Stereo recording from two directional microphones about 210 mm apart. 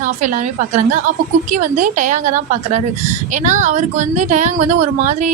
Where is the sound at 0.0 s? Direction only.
35° right (ahead or behind).